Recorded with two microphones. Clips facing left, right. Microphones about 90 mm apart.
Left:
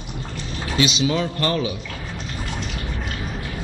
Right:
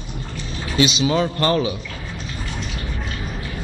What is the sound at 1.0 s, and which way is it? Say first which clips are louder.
Speech: right 3 dB; 35° right (ahead or behind).